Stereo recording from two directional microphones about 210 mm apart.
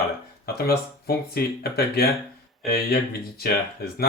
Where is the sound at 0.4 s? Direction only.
50° left (ahead or behind).